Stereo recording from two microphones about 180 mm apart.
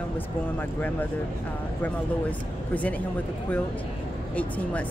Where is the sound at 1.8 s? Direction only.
10° left (ahead or behind).